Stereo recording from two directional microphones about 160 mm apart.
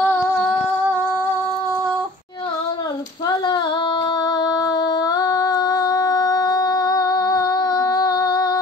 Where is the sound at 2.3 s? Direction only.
25° left (ahead or behind).